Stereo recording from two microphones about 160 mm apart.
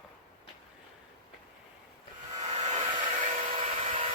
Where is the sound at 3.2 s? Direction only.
55° right (ahead or behind).